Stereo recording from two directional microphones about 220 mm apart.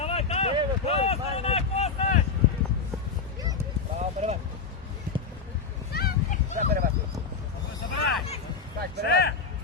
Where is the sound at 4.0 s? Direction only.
30° right (ahead or behind).